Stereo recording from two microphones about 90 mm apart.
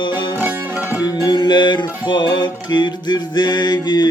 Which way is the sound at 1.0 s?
50° left (ahead or behind).